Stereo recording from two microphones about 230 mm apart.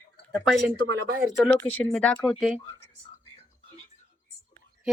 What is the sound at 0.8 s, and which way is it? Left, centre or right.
Speech, right.